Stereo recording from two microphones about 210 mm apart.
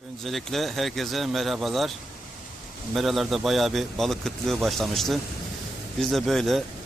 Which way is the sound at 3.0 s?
Centre (ahead or behind).